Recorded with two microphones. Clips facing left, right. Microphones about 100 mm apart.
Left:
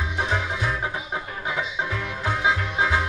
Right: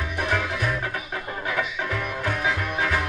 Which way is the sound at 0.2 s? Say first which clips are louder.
Right 1 dB; 20° left (ahead or behind).